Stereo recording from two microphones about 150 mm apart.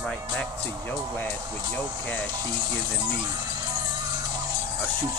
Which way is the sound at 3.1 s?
30° right (ahead or behind).